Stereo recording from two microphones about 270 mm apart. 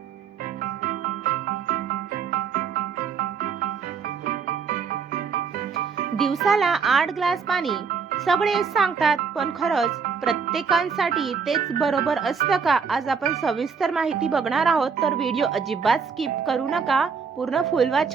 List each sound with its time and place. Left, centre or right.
0.6 s music: right
6.1 s speech: centre